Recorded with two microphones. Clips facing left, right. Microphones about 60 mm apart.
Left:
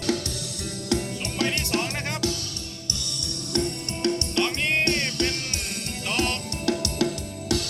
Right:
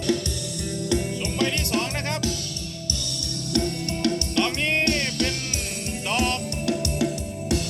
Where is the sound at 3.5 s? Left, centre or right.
Left.